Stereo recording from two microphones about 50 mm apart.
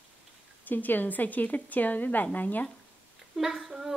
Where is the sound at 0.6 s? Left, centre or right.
Left.